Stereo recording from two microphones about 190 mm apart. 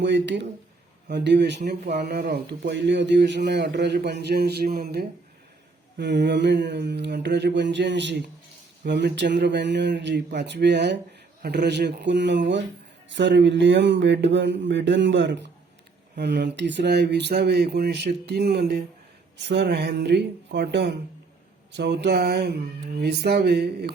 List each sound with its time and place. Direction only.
0.0 s speech: 70° right (ahead or behind)